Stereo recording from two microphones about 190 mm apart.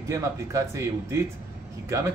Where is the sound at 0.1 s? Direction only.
15° right (ahead or behind).